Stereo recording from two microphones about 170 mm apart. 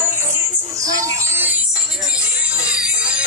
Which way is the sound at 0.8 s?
20° right (ahead or behind).